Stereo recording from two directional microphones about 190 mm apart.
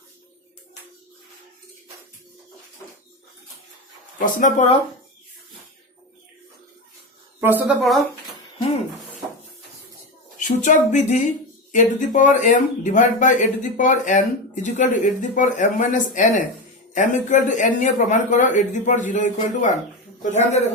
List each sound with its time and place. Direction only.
4.4 s speech: 40° left (ahead or behind)
7.4 s a woman's voice: 10° right (ahead or behind)
10.3 s speech: 40° left (ahead or behind)